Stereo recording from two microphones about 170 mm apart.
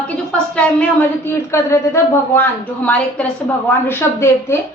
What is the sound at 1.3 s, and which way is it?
A woman's voice, 15° left (ahead or behind).